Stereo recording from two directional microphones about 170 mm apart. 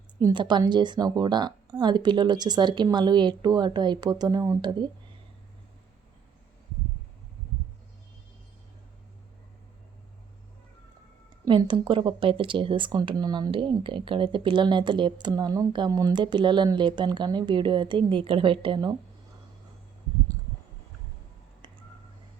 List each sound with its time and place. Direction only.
0.3 s speech: 25° right (ahead or behind)
11.4 s speech: 30° right (ahead or behind)